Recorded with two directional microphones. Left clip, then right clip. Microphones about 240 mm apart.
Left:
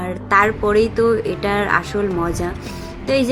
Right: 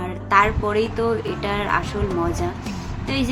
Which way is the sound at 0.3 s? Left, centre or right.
Centre.